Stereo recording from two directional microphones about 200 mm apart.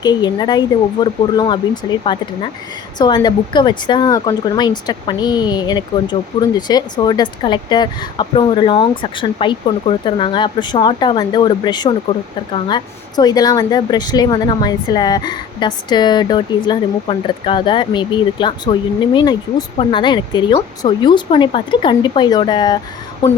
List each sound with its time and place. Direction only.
0.0 s speech: 20° left (ahead or behind)